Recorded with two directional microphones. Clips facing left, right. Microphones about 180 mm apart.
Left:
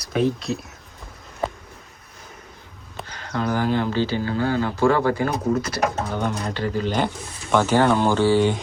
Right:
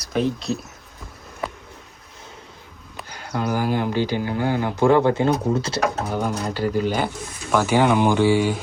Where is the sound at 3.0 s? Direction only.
10° right (ahead or behind); by 6.1 s 25° right (ahead or behind).